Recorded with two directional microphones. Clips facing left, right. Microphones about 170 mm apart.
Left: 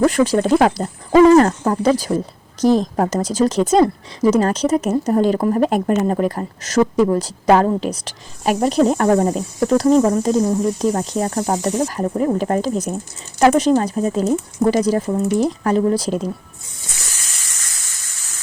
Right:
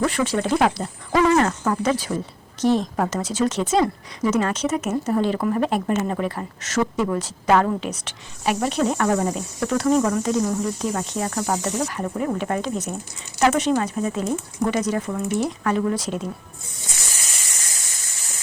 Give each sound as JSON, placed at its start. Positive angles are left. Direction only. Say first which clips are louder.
{"t": 0.0, "sound": "speech", "louder": "left 7 dB", "side_deg": 40}